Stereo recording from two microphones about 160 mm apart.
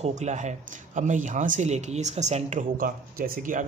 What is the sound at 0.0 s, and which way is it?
Speech, 45° right (ahead or behind).